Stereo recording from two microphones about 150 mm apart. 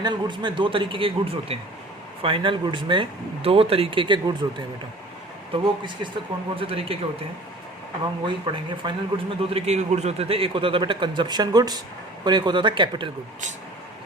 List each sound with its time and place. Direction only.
0.0 s a man's voice: 30° right (ahead or behind)
8.3 s a man's voice: 30° right (ahead or behind)